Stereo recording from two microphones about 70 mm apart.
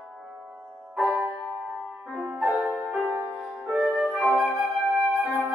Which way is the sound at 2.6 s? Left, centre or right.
Right.